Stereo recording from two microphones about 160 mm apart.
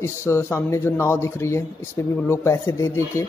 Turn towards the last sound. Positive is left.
turn(degrees=20)  # may be behind; listen again after turning